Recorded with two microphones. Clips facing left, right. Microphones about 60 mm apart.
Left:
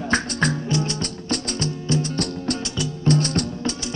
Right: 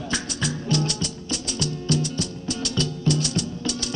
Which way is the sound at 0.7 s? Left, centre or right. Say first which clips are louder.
Left 1 dB; left.